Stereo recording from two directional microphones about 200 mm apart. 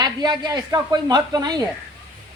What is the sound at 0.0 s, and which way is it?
A woman's voice, 20° right (ahead or behind).